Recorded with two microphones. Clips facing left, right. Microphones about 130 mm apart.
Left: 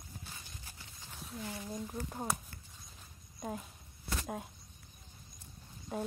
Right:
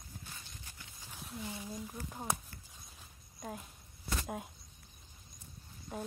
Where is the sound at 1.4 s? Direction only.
15° right (ahead or behind).